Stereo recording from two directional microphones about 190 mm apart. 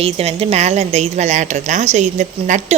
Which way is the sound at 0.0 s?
30° right (ahead or behind).